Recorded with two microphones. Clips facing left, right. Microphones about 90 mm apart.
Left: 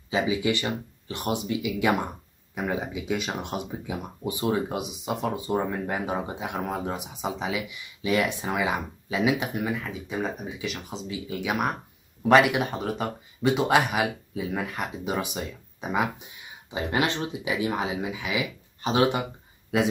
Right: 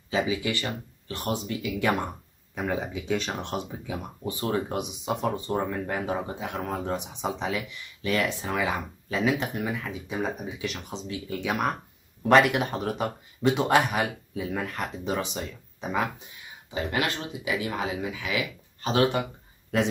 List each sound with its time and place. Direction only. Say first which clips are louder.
0.1 s speech: left 2 dB; 20° left (ahead or behind)
16.7 s speech: left 2 dB; 20° left (ahead or behind)